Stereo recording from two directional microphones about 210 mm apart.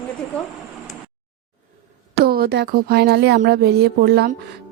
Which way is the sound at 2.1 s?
50° right (ahead or behind).